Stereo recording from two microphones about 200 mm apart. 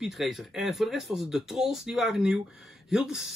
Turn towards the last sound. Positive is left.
turn(degrees=0)  # may be behind; listen again after turning